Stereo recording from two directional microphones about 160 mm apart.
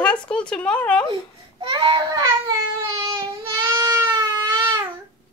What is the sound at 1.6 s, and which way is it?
Speech, 30° right (ahead or behind).